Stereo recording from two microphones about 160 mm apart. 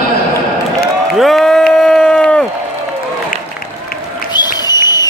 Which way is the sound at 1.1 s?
Centre (ahead or behind).